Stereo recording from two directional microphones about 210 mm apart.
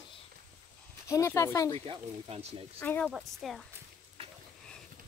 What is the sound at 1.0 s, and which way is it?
Speech, 15° left (ahead or behind).